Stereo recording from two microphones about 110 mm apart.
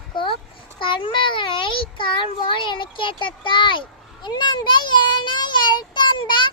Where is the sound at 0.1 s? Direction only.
50° left (ahead or behind).